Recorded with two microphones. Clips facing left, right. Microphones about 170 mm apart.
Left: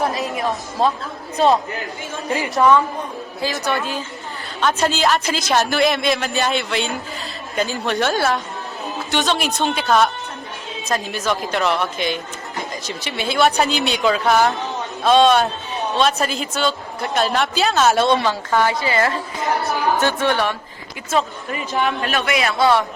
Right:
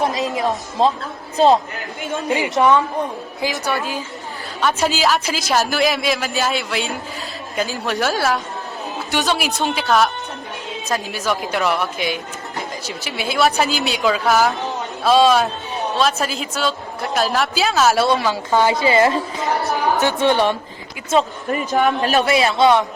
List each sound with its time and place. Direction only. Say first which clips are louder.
0.0 s speech: right 2 dB; 25° right (ahead or behind)
2.3 s a woman's voice: even; 20° right (ahead or behind)
21.5 s a man's voice: right 4 dB; 45° right (ahead or behind); by 22.9 s 20° right (ahead or behind)